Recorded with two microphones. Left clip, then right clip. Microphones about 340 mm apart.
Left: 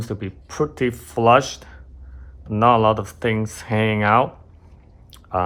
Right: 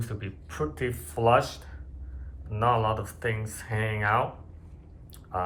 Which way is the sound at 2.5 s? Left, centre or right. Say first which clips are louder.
Left 10 dB; centre.